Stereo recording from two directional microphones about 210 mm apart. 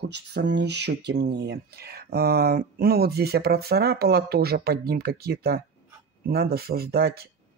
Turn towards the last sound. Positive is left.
turn(degrees=-45)  # may be behind; listen again after turning